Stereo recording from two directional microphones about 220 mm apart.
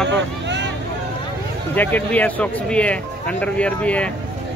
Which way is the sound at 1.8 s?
10° left (ahead or behind).